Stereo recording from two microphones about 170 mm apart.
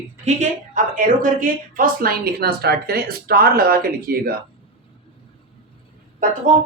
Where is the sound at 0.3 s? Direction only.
50° right (ahead or behind); by 4.4 s 65° right (ahead or behind).